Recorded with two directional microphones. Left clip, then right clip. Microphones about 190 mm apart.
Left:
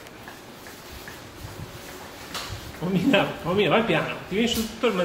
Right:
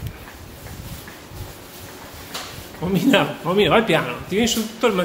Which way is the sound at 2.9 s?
30° right (ahead or behind).